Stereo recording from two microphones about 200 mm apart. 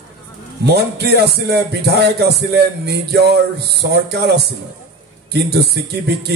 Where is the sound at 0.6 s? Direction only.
55° right (ahead or behind).